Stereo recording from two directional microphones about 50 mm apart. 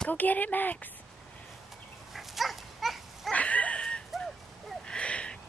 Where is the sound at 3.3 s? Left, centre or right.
Left.